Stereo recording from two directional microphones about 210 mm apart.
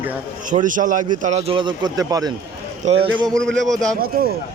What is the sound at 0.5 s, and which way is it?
A man's voice, 40° right (ahead or behind).